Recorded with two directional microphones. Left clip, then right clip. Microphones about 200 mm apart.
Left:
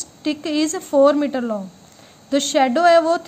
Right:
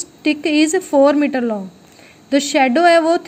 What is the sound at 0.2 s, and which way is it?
A woman's voice, 10° right (ahead or behind).